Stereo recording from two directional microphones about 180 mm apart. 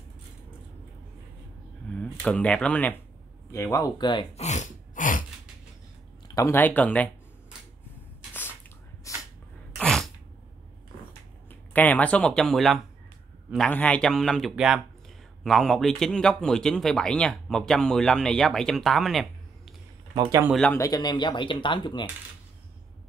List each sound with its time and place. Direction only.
1.9 s speech: 5° left (ahead or behind); by 4.3 s 25° left (ahead or behind)
4.4 s a sound: 40° left (ahead or behind)
6.2 s speech: 20° left (ahead or behind)
9.1 s dog: 15° left (ahead or behind)
9.8 s sneeze: 5° left (ahead or behind)
11.7 s speech: 10° left (ahead or behind)
20.2 s speech: 20° right (ahead or behind)
20.4 s speech: centre (ahead or behind)
20.7 s speech: 20° left (ahead or behind)